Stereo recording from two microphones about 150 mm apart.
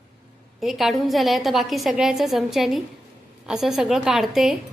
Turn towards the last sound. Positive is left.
turn(degrees=0)  # may be behind; listen again after turning